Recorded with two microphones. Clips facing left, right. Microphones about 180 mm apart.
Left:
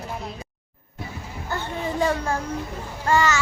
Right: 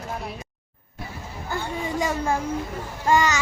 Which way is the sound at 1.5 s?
10° right (ahead or behind).